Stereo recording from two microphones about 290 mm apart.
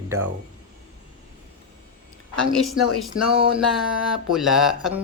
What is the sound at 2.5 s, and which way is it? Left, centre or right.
Mantra, centre.